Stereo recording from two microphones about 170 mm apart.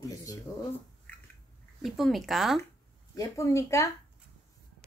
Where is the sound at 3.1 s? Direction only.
20° left (ahead or behind).